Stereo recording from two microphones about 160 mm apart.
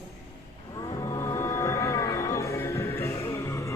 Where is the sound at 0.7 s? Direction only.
25° left (ahead or behind).